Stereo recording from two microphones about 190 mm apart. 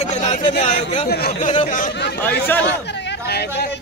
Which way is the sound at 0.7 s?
40° left (ahead or behind).